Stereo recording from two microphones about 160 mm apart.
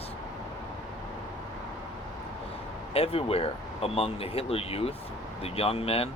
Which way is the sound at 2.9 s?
35° left (ahead or behind).